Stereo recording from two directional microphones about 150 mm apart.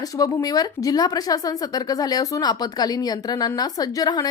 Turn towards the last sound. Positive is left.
turn(degrees=25)  # may be behind; listen again after turning